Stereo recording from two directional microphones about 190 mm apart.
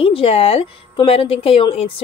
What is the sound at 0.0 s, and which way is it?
Speech, 30° left (ahead or behind).